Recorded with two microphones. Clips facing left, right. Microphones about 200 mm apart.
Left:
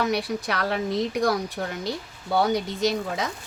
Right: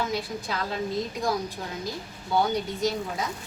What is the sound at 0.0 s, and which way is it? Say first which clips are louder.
A woman's voice: left 5 dB; 70° left (ahead or behind).